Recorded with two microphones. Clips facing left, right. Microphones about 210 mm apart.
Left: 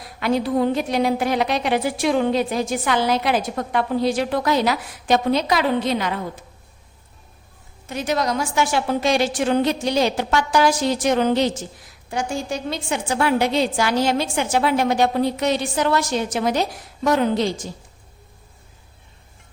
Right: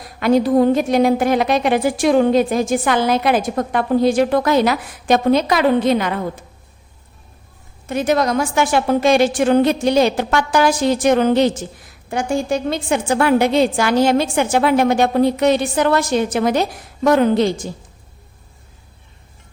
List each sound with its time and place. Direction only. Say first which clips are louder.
0.0 s a woman's voice: right 6 dB; 45° right (ahead or behind)
7.9 s a woman's voice: right 5 dB; 55° right (ahead or behind)